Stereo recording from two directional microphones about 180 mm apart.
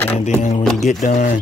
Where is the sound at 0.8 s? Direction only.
40° left (ahead or behind).